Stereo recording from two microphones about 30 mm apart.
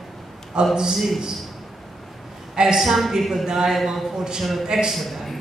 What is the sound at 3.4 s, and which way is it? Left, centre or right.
A man's voice, centre.